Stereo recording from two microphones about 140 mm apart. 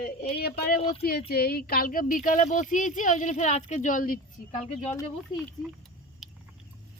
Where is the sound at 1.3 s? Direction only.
90° left.